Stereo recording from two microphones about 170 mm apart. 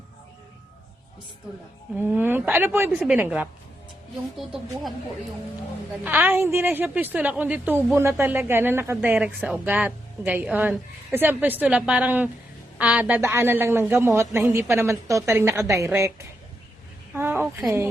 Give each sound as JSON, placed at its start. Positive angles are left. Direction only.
{"t": 2.0, "sound": "a woman's voice", "side_deg": -10}
{"t": 6.1, "sound": "a woman's voice", "side_deg": -10}
{"t": 17.2, "sound": "a sound", "side_deg": -10}